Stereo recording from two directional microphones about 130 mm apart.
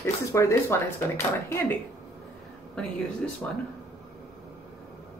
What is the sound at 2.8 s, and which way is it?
Speech, 5° left (ahead or behind).